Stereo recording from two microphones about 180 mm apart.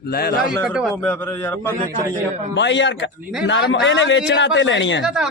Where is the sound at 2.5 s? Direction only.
85° left.